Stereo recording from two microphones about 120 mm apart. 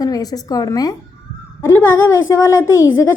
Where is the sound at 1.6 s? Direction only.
20° left (ahead or behind).